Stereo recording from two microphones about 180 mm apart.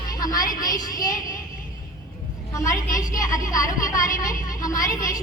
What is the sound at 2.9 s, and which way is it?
A woman's voice, 20° left (ahead or behind).